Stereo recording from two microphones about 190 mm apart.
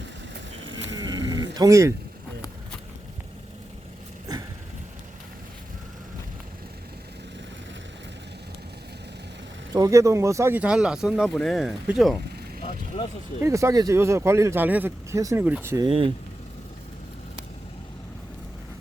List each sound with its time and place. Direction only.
0.9 s a sound: 20° right (ahead or behind)
9.7 s speech: 15° right (ahead or behind); by 12.1 s centre (ahead or behind)
12.9 s speech: 30° left (ahead or behind)
13.4 s speech: 15° right (ahead or behind)
15.9 s speech: 30° right (ahead or behind)